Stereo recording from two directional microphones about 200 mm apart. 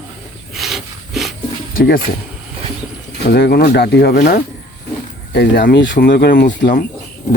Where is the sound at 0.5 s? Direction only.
Centre (ahead or behind).